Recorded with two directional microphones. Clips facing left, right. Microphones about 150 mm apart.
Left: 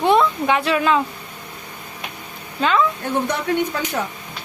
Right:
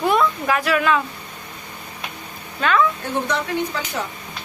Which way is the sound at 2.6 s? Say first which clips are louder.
Even; 25° left (ahead or behind).